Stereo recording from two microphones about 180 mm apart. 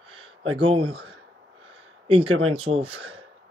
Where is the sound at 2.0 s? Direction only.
30° right (ahead or behind).